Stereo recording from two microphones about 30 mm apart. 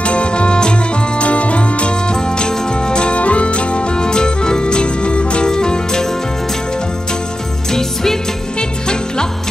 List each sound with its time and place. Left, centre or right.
0.0 s music: left
1.2 s music: left
2.1 s music: left
3.2 s music: left
5.5 s music: left
7.7 s music: centre
8.5 s music: left